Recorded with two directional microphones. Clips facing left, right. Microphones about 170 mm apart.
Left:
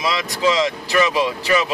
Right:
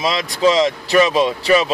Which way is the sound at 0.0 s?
30° right (ahead or behind).